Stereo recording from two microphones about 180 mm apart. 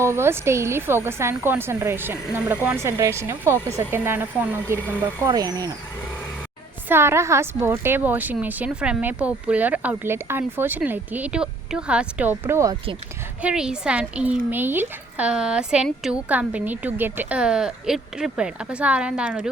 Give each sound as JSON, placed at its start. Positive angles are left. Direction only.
{"t": 0.0, "sound": "a woman's voice", "side_deg": -15}
{"t": 6.8, "sound": "a woman's voice", "side_deg": -15}